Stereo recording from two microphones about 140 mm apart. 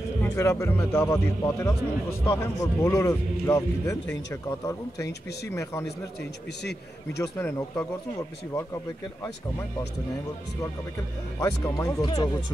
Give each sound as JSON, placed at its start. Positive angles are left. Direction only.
{"t": 0.2, "sound": "speech", "side_deg": 20}
{"t": 7.2, "sound": "speech", "side_deg": 15}
{"t": 11.3, "sound": "speech", "side_deg": 20}